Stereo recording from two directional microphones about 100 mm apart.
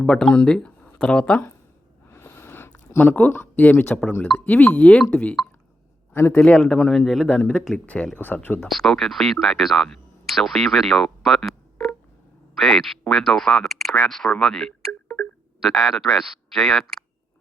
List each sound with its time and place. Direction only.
0.0 s speech: 10° left (ahead or behind)
2.0 s a sound: 25° left (ahead or behind)
4.4 s speech: 15° left (ahead or behind)
6.1 s a man's voice: 25° left (ahead or behind)
6.9 s speech: centre (ahead or behind)
7.3 s speech: 15° left (ahead or behind)
8.6 s speech: centre (ahead or behind)
15.0 s a sound: 20° left (ahead or behind)
15.6 s speech: centre (ahead or behind)